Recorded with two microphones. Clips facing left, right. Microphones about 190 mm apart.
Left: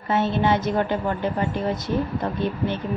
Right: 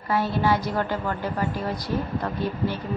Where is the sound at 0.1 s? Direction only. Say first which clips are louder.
Left 2 dB; 25° left (ahead or behind).